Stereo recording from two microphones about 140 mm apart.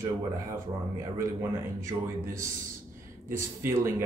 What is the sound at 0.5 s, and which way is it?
Speech, 20° right (ahead or behind).